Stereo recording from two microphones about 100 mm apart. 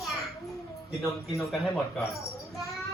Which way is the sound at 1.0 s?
Centre (ahead or behind).